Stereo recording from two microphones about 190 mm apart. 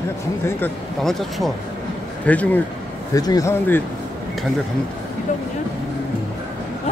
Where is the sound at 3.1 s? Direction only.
20° left (ahead or behind).